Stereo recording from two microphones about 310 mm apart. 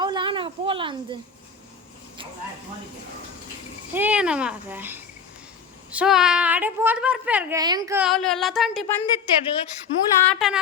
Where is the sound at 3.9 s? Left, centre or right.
Centre.